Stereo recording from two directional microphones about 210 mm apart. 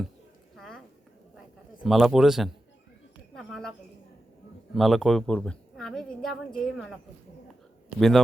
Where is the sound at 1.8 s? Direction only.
Centre (ahead or behind).